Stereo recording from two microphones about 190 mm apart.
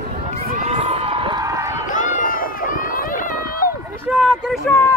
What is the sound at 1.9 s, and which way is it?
Run, 45° left (ahead or behind).